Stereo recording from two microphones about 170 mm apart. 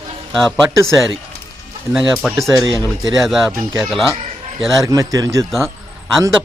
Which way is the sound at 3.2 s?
Centre (ahead or behind).